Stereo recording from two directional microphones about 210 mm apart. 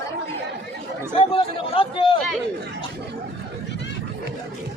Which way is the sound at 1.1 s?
25° left (ahead or behind).